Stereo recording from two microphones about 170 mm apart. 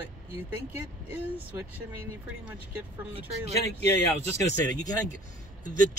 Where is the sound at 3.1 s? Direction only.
40° right (ahead or behind).